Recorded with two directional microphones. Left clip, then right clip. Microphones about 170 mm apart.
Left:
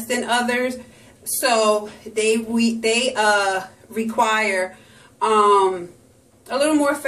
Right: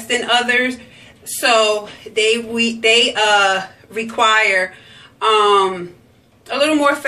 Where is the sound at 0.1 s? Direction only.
30° left (ahead or behind).